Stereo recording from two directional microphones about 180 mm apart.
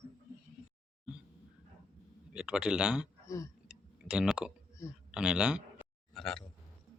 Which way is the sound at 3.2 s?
15° left (ahead or behind).